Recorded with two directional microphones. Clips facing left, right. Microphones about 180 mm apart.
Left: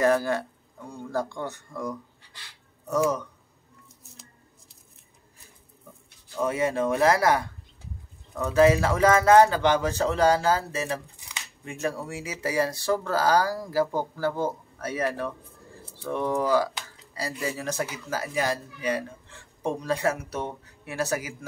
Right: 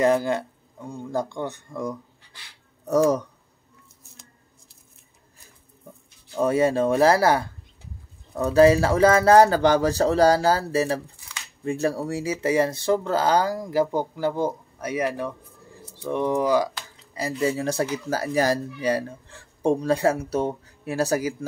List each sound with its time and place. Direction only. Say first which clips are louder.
0.0 s speech: right 2 dB; 20° right (ahead or behind)
2.9 s speech: right 5 dB; 40° right (ahead or behind)
6.3 s speech: right 5 dB; 30° right (ahead or behind)